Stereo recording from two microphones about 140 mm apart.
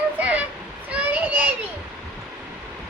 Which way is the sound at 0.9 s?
10° right (ahead or behind).